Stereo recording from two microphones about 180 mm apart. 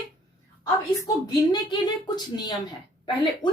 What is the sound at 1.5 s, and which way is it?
A woman's voice, 25° left (ahead or behind).